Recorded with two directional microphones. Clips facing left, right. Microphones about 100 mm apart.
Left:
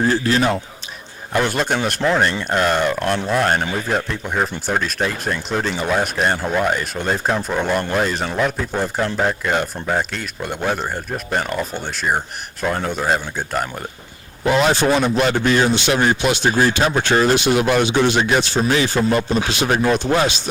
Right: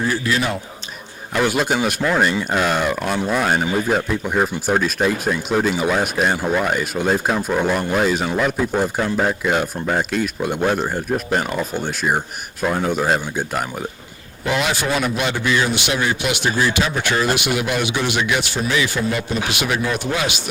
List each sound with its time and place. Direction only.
0.1 s speech: 40° left (ahead or behind)
1.4 s speech: 5° right (ahead or behind)
14.4 s a man's voice: 40° left (ahead or behind)